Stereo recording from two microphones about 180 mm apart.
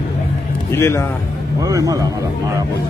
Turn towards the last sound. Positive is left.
turn(degrees=-20)  # may be behind; listen again after turning